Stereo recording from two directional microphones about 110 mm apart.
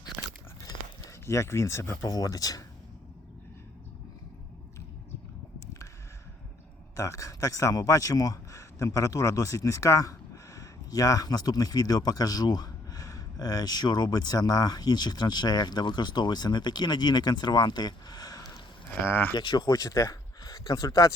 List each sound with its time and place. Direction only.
1.2 s speech: 25° left (ahead or behind)
6.9 s speech: 30° left (ahead or behind)
18.9 s speech: 20° left (ahead or behind)
19.3 s speech: 40° left (ahead or behind)